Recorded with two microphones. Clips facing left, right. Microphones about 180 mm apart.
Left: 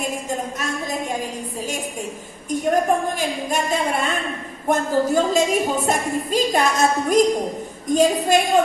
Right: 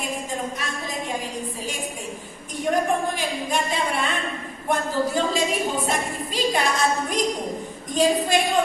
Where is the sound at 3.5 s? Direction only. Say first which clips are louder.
Left 3 dB; 45° left (ahead or behind).